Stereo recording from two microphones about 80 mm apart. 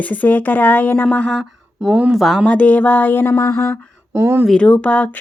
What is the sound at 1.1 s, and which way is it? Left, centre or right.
Speech, centre.